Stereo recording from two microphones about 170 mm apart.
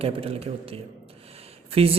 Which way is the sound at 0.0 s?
35° right (ahead or behind).